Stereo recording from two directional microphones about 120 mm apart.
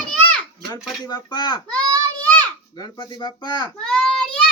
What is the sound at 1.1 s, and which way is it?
Speech, 35° left (ahead or behind).